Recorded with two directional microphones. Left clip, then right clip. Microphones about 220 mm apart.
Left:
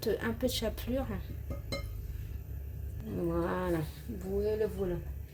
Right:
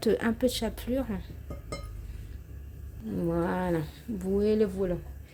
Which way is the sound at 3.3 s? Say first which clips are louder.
Right 4 dB; 20° right (ahead or behind).